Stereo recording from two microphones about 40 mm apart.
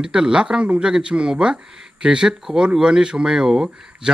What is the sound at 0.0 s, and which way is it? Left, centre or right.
Speech, centre.